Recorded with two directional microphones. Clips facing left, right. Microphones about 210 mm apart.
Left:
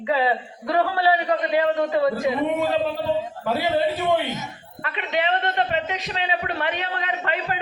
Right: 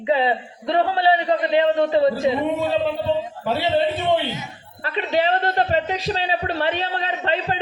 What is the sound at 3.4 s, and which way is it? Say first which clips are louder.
A man's voice: right 2 dB; 25° right (ahead or behind).